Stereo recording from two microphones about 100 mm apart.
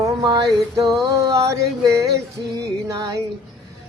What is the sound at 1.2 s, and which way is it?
Music, 35° right (ahead or behind).